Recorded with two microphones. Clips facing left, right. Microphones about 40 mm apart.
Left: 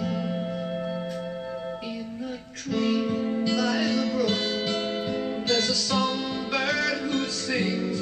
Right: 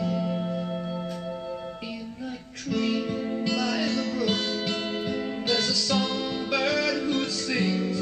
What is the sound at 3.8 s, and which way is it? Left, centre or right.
Music, centre.